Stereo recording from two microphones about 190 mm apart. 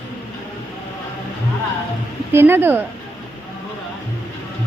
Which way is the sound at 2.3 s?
10° right (ahead or behind).